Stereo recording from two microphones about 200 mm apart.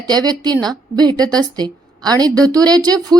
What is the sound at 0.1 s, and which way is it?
Speech, 20° right (ahead or behind).